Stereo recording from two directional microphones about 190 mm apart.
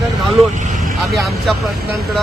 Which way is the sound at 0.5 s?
40° right (ahead or behind).